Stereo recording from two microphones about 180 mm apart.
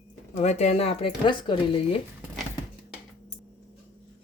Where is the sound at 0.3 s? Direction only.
35° left (ahead or behind).